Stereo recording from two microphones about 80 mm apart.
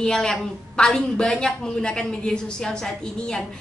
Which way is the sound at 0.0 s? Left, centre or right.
Centre.